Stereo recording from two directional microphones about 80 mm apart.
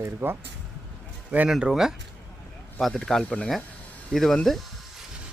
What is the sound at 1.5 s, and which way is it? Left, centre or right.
Speech, centre.